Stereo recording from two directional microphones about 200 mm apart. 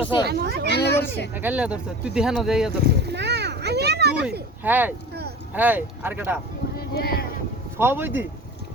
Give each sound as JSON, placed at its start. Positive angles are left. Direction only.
{"t": 0.0, "sound": "speech", "side_deg": 25}
{"t": 0.3, "sound": "speech", "side_deg": -50}
{"t": 0.7, "sound": "a sound", "side_deg": 55}
{"t": 1.3, "sound": "speech", "side_deg": -10}
{"t": 2.8, "sound": "a sound", "side_deg": -55}
{"t": 4.6, "sound": "speech", "side_deg": -10}
{"t": 6.7, "sound": "speech", "side_deg": 50}
{"t": 7.8, "sound": "speech", "side_deg": -10}